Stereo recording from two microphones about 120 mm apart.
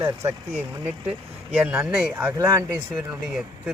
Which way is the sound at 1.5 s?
15° right (ahead or behind).